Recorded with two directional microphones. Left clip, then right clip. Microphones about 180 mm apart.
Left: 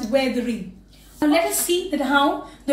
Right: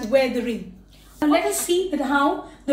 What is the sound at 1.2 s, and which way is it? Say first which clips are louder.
Speech: left 1 dB; 10° right (ahead or behind).